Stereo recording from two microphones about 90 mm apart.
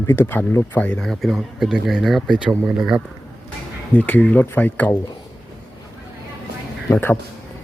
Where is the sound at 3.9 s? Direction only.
20° left (ahead or behind).